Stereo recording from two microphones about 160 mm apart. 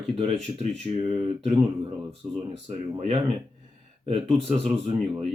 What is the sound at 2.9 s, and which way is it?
Speech, 40° right (ahead or behind).